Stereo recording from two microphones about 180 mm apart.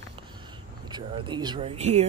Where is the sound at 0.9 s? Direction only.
25° right (ahead or behind).